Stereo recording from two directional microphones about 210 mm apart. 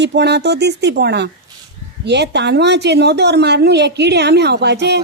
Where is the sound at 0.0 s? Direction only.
55° right (ahead or behind).